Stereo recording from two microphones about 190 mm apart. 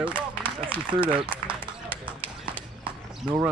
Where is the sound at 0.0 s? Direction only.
5° right (ahead or behind).